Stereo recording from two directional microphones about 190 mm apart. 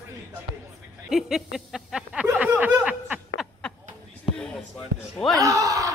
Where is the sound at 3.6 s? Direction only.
5° left (ahead or behind).